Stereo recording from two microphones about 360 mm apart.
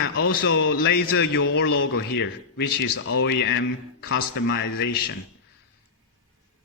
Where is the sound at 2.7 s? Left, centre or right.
Left.